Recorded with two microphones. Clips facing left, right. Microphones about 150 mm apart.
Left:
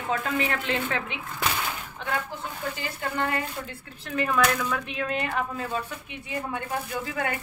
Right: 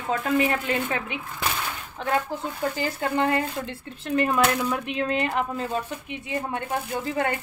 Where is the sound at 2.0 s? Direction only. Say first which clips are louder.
Right 7 dB; 40° right (ahead or behind).